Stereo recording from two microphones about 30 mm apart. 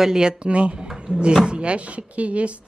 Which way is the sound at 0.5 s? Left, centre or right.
Right.